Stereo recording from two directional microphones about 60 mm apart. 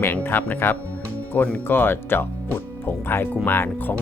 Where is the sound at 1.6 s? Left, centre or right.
Left.